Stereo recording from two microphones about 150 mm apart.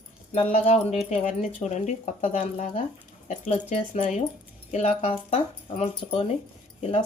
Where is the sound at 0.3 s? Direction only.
45° left (ahead or behind).